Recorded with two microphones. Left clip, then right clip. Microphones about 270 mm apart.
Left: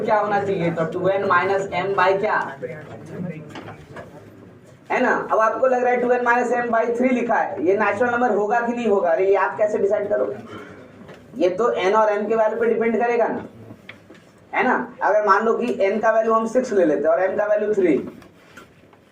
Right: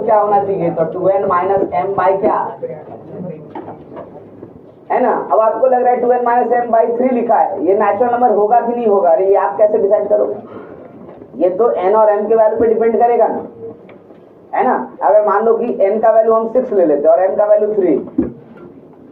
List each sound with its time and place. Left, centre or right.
0.1 s speech: left
4.9 s speech: left
8.9 s speech: left
11.4 s speech: left
14.5 s speech: left